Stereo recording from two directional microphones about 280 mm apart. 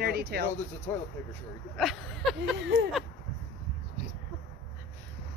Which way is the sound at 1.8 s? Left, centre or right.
Centre.